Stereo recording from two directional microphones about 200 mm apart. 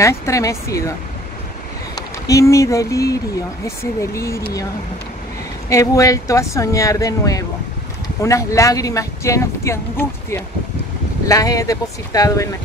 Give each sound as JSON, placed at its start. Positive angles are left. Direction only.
{"t": 0.0, "sound": "speech", "side_deg": 15}
{"t": 2.0, "sound": "speech", "side_deg": 15}
{"t": 5.7, "sound": "speech", "side_deg": 15}